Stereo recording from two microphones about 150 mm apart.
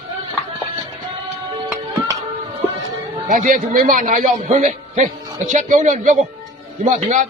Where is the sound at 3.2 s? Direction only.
60° right (ahead or behind).